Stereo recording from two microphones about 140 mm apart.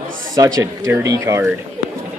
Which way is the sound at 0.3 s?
25° right (ahead or behind).